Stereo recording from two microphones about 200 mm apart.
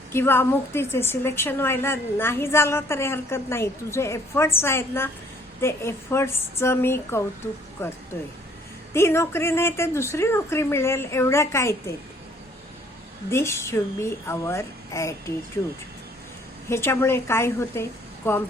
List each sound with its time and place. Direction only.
0.1 s a woman's voice: 10° left (ahead or behind)
13.3 s a woman's voice: 15° left (ahead or behind)
16.6 s a woman's voice: 10° left (ahead or behind)